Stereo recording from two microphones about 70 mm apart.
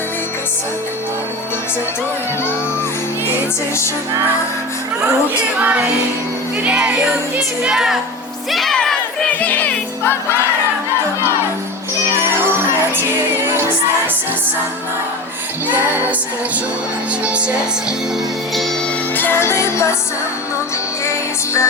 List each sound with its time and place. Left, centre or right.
5.5 s music: right; by 8.7 s centre
8.7 s crowd: centre
9.3 s music: left
17.2 s music: centre
19.1 s music: left
21.0 s music: left